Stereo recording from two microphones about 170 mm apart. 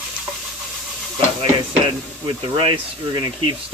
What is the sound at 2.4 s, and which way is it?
Speech, 30° right (ahead or behind).